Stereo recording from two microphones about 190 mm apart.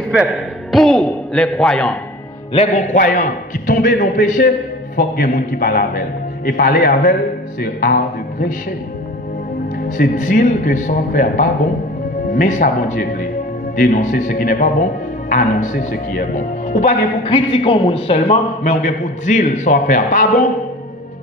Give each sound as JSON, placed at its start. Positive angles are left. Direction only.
{"t": 0.1, "sound": "a man's voice", "side_deg": 0}
{"t": 2.5, "sound": "speech", "side_deg": 35}
{"t": 9.8, "sound": "speech", "side_deg": 45}
{"t": 17.3, "sound": "a man's voice", "side_deg": 25}